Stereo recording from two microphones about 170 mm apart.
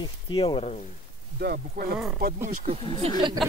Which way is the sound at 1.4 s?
65° right (ahead or behind).